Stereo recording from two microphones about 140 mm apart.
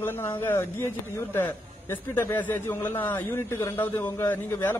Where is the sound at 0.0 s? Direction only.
15° left (ahead or behind).